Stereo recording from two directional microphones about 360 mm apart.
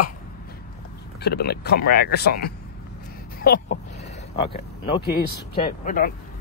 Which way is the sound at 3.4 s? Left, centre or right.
Left.